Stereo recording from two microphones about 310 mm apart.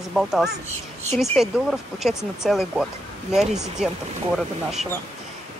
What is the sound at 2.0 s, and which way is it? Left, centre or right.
Speech, centre.